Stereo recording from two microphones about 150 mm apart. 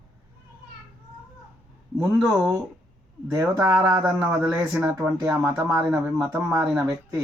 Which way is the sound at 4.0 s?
10° right (ahead or behind).